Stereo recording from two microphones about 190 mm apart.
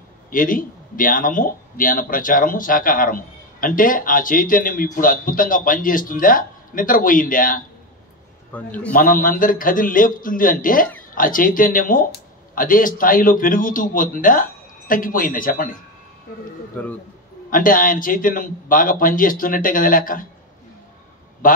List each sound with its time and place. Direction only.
0.3 s speech: 45° left (ahead or behind)
8.5 s a man's voice: 10° left (ahead or behind)
8.9 s speech: 45° left (ahead or behind)
16.8 s a man's voice: 5° left (ahead or behind)
17.5 s speech: 45° left (ahead or behind)